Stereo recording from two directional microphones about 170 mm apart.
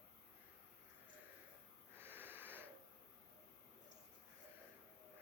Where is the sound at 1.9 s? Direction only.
15° right (ahead or behind).